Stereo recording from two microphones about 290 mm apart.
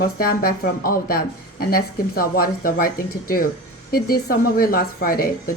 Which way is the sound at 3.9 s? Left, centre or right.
Left.